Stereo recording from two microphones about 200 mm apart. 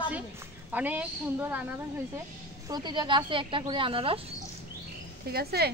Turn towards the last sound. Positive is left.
turn(degrees=-50)  # may be behind; listen again after turning